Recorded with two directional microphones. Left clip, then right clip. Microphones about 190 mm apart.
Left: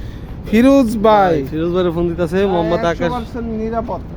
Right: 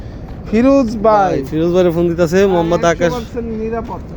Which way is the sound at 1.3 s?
10° right (ahead or behind).